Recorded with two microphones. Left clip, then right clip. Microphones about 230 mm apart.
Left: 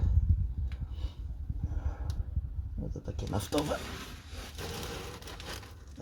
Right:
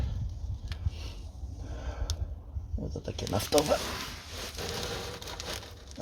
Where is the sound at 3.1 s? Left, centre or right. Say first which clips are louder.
Right 6 dB; right.